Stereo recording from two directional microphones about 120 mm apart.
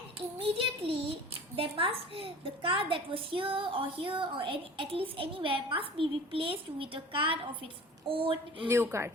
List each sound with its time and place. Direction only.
0.3 s a woman's voice: 50° right (ahead or behind)
8.6 s a woman's voice: 20° right (ahead or behind)